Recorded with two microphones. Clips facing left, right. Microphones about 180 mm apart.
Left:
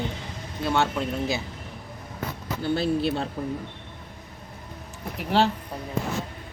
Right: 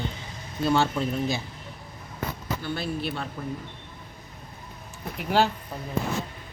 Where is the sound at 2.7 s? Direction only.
25° left (ahead or behind).